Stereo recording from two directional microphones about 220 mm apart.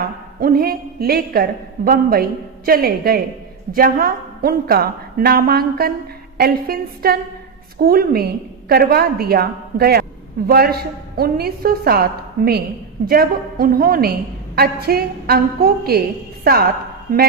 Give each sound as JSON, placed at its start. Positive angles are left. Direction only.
{"t": 0.0, "sound": "a woman's voice", "side_deg": -40}